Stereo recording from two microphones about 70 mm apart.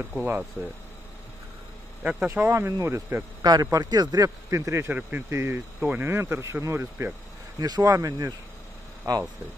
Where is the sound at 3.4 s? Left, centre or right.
Right.